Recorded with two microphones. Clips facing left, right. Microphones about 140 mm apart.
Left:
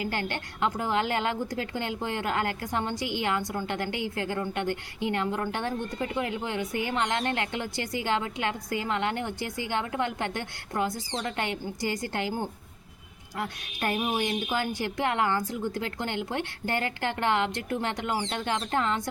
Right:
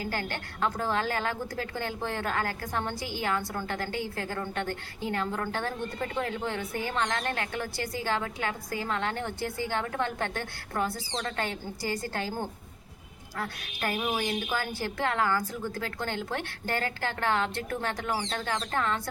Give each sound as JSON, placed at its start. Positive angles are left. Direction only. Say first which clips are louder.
{"t": 0.0, "sound": "a woman's voice", "louder": "left 2 dB", "side_deg": 20}